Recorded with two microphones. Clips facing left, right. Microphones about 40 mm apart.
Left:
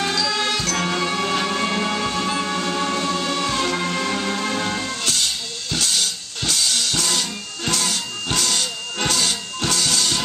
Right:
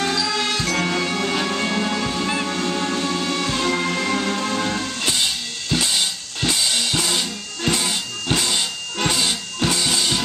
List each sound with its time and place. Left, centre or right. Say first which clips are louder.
0.0 s music: even; centre
5.0 s drum kit: right 1 dB; centre
8.3 s music: right 2 dB; centre